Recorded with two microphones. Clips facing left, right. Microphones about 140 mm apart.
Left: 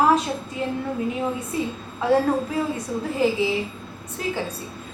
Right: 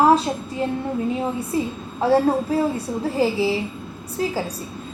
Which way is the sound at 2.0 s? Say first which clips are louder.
Right 2 dB; 30° right (ahead or behind).